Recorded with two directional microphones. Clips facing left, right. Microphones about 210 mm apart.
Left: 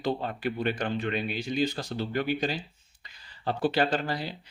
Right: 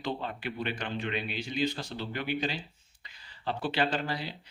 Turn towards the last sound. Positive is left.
turn(degrees=45)  # may be behind; listen again after turning